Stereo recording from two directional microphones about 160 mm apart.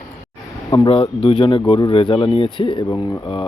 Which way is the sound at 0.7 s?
30° left (ahead or behind).